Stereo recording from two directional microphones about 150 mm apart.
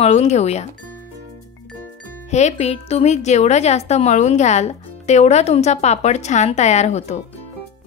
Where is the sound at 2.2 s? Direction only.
50° left (ahead or behind).